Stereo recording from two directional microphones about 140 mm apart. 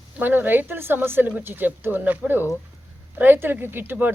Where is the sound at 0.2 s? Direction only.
15° right (ahead or behind).